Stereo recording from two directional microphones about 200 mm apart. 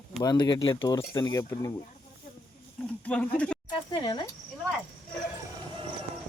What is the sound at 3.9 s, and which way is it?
Speech, 25° left (ahead or behind).